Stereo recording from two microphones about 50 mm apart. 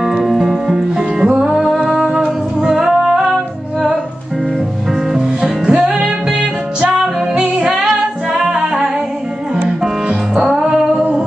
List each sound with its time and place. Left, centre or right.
0.0 s music: centre
1.5 s music: centre
5.1 s music: centre